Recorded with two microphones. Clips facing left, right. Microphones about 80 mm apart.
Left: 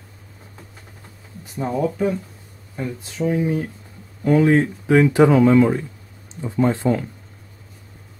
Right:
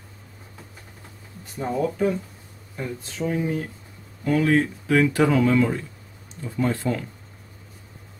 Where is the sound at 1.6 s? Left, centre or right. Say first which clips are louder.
Left 2 dB; centre.